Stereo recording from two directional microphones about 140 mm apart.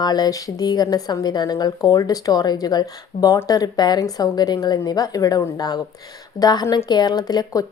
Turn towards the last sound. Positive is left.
turn(degrees=30)  # may be behind; listen again after turning